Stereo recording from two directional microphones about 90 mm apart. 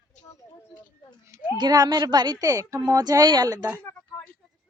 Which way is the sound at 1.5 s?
50° right (ahead or behind).